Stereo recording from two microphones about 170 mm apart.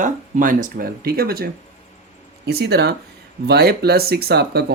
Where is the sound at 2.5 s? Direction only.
70° right (ahead or behind).